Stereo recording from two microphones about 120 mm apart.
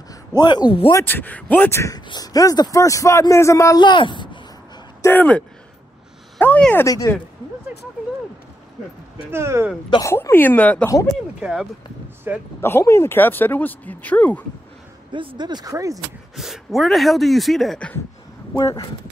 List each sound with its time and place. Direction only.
0.4 s speech: 35° left (ahead or behind)
0.9 s speech: 15° left (ahead or behind)
2.0 s a man's voice: 35° left (ahead or behind)
3.8 s speech: 40° left (ahead or behind)
5.0 s speech: 15° left (ahead or behind)
6.4 s speech: 15° left (ahead or behind)
6.9 s a man's voice: 30° left (ahead or behind)
9.3 s speech: 20° right (ahead or behind)
10.0 s speech: 20° left (ahead or behind)
12.3 s speech: 15° right (ahead or behind)
12.6 s speech: 20° left (ahead or behind)
15.1 s speech: 40° right (ahead or behind)
16.3 s speech: 5° right (ahead or behind)